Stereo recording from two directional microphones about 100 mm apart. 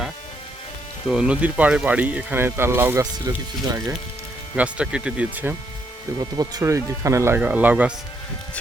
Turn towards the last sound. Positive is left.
turn(degrees=-15)  # may be behind; listen again after turning